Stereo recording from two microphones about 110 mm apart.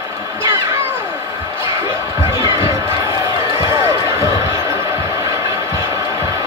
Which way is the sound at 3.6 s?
25° right (ahead or behind).